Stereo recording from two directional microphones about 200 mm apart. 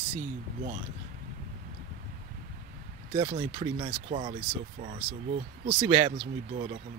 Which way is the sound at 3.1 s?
30° right (ahead or behind).